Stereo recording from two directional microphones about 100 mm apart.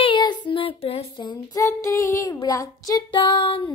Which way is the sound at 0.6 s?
70° left (ahead or behind).